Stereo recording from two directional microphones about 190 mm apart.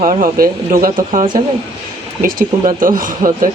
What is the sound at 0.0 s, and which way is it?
Speech, 45° right (ahead or behind).